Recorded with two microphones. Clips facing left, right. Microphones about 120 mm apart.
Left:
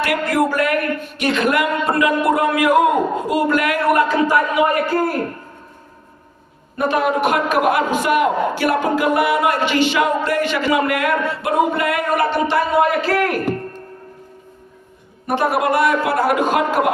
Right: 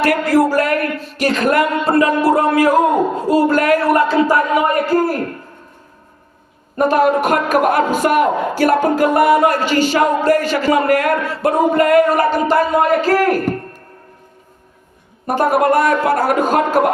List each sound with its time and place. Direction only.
0.0 s a sound: 35° right (ahead or behind)
6.7 s a man's voice: 40° right (ahead or behind)
15.3 s a man's voice: 45° right (ahead or behind)